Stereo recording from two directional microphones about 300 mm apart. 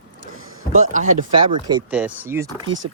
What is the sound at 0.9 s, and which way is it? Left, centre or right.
Speech, right.